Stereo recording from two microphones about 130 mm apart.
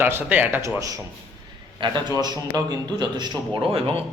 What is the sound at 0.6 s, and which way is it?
A man's voice, 25° right (ahead or behind).